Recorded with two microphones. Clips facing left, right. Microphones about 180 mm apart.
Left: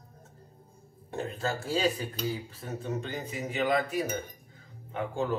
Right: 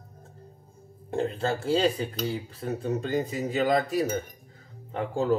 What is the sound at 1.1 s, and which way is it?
Speech, 30° right (ahead or behind).